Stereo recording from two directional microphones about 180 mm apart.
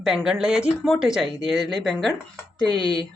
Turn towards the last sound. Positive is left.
turn(degrees=-25)  # may be behind; listen again after turning